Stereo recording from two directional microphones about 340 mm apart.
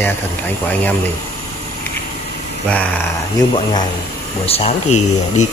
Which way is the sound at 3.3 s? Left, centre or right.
Centre.